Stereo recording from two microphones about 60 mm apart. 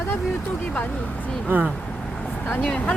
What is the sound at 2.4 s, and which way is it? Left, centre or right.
Speech, left.